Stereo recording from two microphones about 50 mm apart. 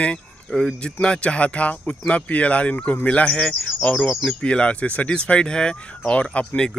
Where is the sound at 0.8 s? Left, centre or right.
Centre.